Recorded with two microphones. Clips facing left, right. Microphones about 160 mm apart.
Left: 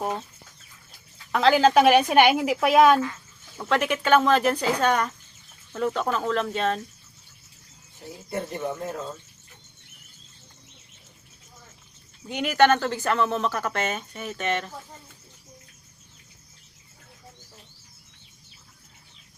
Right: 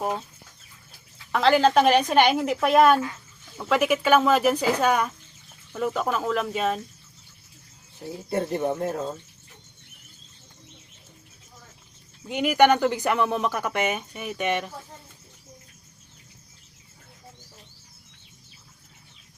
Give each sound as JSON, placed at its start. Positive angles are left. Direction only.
{"t": 1.3, "sound": "a woman's voice", "side_deg": 0}
{"t": 8.3, "sound": "speech", "side_deg": -30}
{"t": 12.3, "sound": "speech", "side_deg": -5}